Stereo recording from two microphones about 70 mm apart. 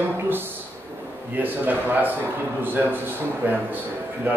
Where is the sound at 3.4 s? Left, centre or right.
Right.